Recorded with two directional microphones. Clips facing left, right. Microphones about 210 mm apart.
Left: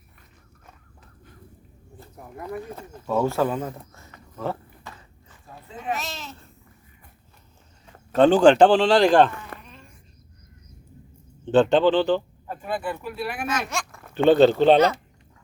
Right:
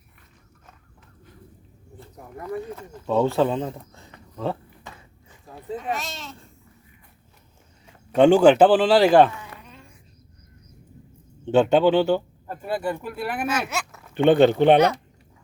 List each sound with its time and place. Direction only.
3.1 s speech: 15° right (ahead or behind)
5.9 s speech: centre (ahead or behind)
8.1 s speech: 10° right (ahead or behind)
9.5 s a sound: 55° left (ahead or behind)
11.4 s speech: 10° right (ahead or behind)
12.6 s speech: 40° right (ahead or behind)
13.4 s speech: 5° right (ahead or behind)
14.1 s speech: 55° right (ahead or behind)
14.3 s speech: 15° right (ahead or behind)